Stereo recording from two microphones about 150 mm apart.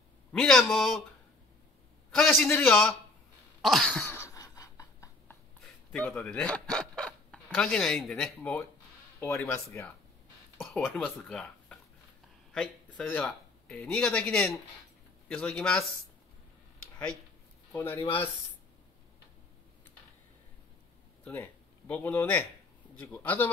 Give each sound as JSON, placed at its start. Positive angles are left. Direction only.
{"t": 0.3, "sound": "a man's voice", "side_deg": 5}
{"t": 2.0, "sound": "speech", "side_deg": 10}
{"t": 3.6, "sound": "a sound", "side_deg": 5}
{"t": 5.9, "sound": "speech", "side_deg": 10}
{"t": 10.6, "sound": "speech", "side_deg": 0}
{"t": 13.1, "sound": "speech", "side_deg": 5}
{"t": 17.7, "sound": "speech", "side_deg": 15}
{"t": 21.2, "sound": "speech", "side_deg": 10}